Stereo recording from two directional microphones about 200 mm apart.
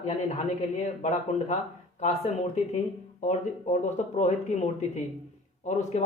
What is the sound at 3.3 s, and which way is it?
A man's voice, 35° left (ahead or behind).